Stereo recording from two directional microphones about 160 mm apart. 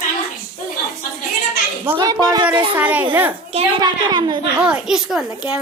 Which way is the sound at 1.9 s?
25° right (ahead or behind).